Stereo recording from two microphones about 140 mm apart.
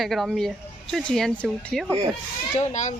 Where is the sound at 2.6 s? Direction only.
60° left (ahead or behind).